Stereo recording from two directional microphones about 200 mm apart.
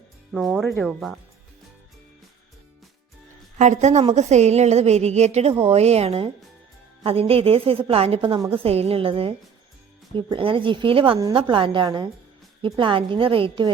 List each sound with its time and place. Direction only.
0.3 s speech: centre (ahead or behind)
3.6 s a woman's voice: 35° right (ahead or behind)